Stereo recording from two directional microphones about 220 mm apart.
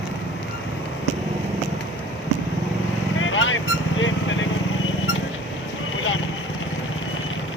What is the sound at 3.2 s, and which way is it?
Vehicle, 60° left (ahead or behind).